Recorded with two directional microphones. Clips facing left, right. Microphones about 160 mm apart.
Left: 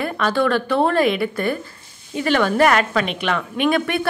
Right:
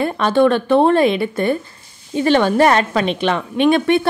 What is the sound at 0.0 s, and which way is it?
A woman's voice, 25° right (ahead or behind).